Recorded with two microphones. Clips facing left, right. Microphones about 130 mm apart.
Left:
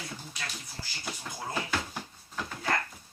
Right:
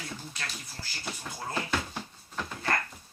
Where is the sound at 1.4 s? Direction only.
Centre (ahead or behind).